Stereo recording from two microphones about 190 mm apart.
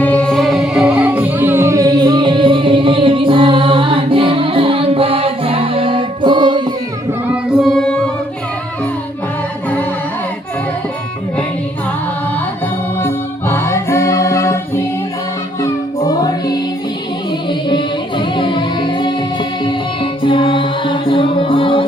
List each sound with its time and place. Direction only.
0.0 s music: 5° left (ahead or behind); by 6.7 s 25° right (ahead or behind)
7.6 s music: 5° left (ahead or behind)
13.0 s music: 10° left (ahead or behind)
16.0 s music: 20° left (ahead or behind)
17.7 s music: 25° left (ahead or behind)